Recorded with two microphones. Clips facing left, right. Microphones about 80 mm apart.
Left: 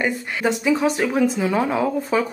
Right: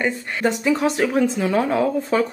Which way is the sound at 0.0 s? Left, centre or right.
Centre.